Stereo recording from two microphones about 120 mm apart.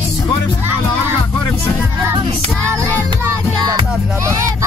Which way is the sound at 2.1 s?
45° right (ahead or behind).